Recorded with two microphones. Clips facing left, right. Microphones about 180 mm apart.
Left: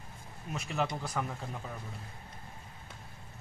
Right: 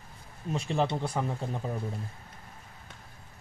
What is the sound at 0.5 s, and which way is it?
Speech, 30° right (ahead or behind).